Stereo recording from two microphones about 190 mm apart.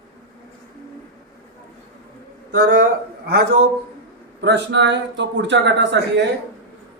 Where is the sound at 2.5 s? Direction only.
65° right (ahead or behind).